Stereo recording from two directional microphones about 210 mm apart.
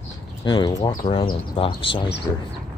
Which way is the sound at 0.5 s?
20° left (ahead or behind).